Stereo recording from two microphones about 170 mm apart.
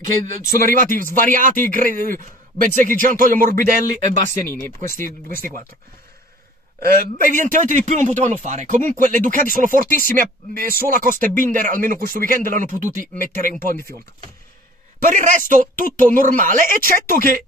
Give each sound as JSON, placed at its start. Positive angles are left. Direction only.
{"t": 0.0, "sound": "speech", "side_deg": -50}
{"t": 4.3, "sound": "speech", "side_deg": 15}
{"t": 4.7, "sound": "speech", "side_deg": -50}
{"t": 7.2, "sound": "speech", "side_deg": -50}
{"t": 15.0, "sound": "speech", "side_deg": -50}